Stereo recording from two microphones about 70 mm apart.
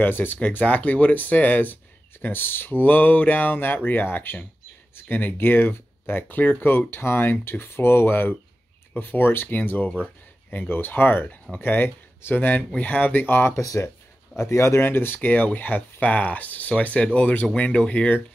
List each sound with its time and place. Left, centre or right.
0.0 s speech: left
13.6 s speech: left; by 18.2 s centre